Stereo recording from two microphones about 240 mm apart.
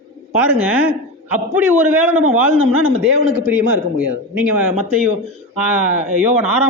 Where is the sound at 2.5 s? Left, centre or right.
Right.